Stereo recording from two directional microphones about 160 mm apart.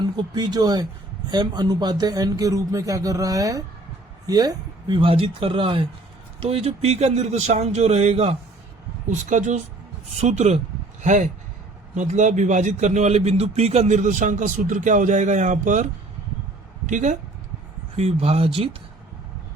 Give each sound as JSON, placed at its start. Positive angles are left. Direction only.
{"t": 0.0, "sound": "a man's voice", "side_deg": -25}
{"t": 9.0, "sound": "a man's voice", "side_deg": -50}
{"t": 17.9, "sound": "a man's voice", "side_deg": -40}